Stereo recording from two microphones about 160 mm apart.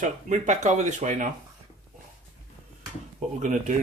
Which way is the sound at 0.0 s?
50° right (ahead or behind).